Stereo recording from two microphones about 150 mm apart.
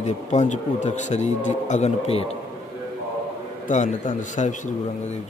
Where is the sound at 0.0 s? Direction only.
50° left (ahead or behind).